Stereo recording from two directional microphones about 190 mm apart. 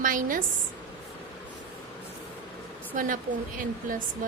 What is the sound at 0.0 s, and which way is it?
Speech, 45° right (ahead or behind).